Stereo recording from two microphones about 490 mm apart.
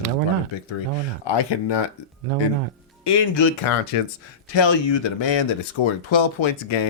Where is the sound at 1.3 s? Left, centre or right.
Left.